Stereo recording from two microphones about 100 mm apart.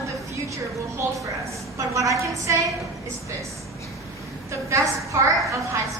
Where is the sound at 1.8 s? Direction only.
35° right (ahead or behind).